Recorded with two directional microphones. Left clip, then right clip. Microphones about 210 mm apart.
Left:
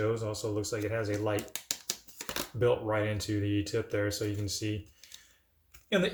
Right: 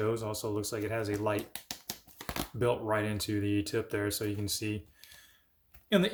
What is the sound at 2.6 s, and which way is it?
Speech, 50° right (ahead or behind).